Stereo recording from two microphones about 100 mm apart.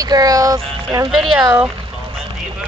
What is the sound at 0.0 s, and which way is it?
Speech, 40° right (ahead or behind).